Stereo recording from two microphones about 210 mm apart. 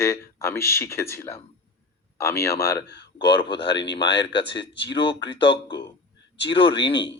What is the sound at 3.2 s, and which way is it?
Speech, 25° left (ahead or behind).